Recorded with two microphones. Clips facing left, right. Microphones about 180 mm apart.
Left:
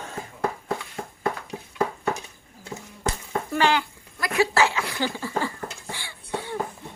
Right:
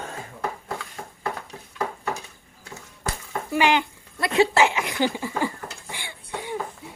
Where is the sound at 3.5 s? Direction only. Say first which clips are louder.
Right 2 dB; 15° right (ahead or behind).